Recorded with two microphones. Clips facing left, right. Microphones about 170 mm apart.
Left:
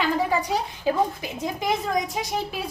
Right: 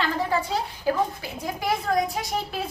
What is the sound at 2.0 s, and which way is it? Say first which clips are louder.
Speech: right 1 dB; 20° left (ahead or behind).